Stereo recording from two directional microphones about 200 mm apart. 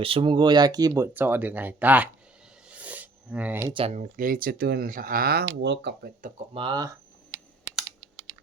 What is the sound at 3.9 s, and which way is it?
Speech, 40° right (ahead or behind).